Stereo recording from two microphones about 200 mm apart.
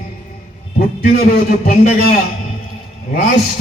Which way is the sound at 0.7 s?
45° left (ahead or behind).